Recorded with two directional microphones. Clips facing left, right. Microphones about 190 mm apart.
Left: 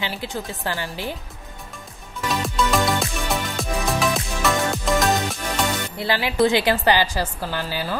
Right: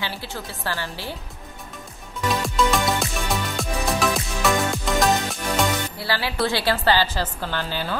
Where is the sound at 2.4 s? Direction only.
Centre (ahead or behind).